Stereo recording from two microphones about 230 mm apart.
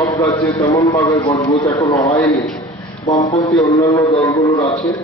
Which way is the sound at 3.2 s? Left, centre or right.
Centre.